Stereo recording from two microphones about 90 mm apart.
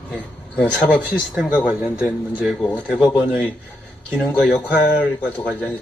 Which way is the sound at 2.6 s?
10° left (ahead or behind).